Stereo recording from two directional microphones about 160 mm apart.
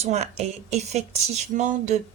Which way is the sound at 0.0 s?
45° right (ahead or behind).